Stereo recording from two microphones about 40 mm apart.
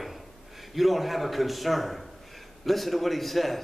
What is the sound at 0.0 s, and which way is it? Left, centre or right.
A man's voice, centre.